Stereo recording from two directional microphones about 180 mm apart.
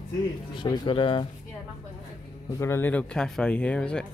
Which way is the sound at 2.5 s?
15° left (ahead or behind).